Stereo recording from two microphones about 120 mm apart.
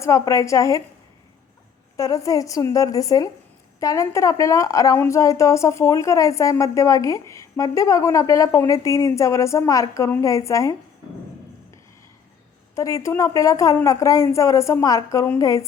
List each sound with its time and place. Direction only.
0.0 s a woman's voice: 25° left (ahead or behind)
2.0 s a woman's voice: 30° left (ahead or behind)
12.7 s a woman's voice: 25° left (ahead or behind)